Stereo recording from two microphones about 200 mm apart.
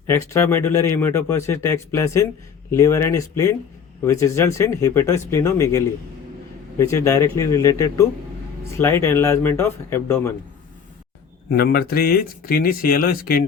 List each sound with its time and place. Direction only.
0.1 s speech: 15° left (ahead or behind)
11.5 s speech: 50° left (ahead or behind)